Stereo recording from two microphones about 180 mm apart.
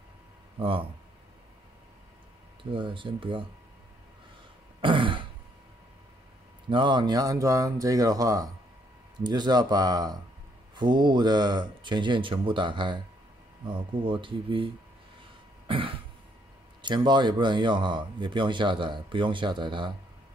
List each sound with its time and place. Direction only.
0.6 s speech: 30° right (ahead or behind)
2.7 s speech: 30° right (ahead or behind)
4.8 s throat clearing: 30° right (ahead or behind)
6.7 s speech: 25° right (ahead or behind)
15.6 s cough: 30° right (ahead or behind)
16.8 s speech: 25° right (ahead or behind)